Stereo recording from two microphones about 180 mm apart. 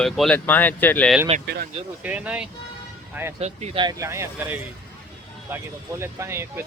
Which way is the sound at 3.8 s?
20° right (ahead or behind).